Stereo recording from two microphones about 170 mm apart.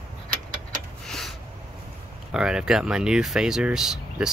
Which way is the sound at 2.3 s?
5° right (ahead or behind).